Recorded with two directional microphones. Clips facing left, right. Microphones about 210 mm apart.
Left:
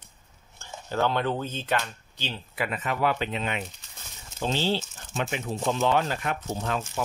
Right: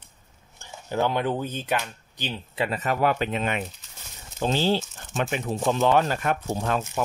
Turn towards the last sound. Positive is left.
turn(degrees=-50)  # may be behind; listen again after turning